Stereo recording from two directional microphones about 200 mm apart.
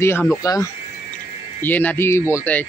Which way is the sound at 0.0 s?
10° left (ahead or behind).